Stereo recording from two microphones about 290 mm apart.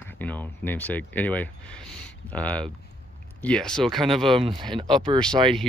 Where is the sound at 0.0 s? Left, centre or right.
Centre.